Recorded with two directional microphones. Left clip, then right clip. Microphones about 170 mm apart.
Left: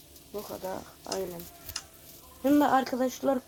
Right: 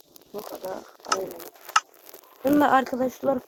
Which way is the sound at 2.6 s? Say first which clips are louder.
Right 6 dB; 15° right (ahead or behind).